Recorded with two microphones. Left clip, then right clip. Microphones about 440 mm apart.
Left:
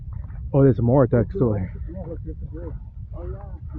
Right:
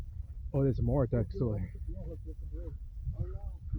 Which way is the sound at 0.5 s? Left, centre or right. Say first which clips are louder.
Left 14 dB; right.